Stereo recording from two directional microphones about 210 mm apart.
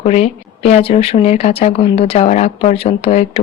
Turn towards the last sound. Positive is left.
turn(degrees=30)  # may be behind; listen again after turning